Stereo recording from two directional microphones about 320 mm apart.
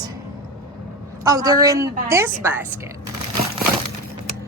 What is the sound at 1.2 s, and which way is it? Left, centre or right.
A woman's voice, centre.